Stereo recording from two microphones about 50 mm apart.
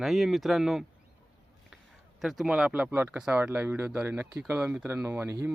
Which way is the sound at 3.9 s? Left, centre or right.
Right.